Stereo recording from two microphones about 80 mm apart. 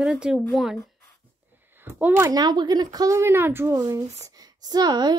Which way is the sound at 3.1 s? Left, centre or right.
Right.